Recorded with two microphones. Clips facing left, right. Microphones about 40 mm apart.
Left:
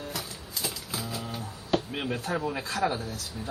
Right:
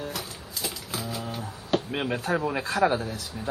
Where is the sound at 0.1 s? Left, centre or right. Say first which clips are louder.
Right 1 dB; centre.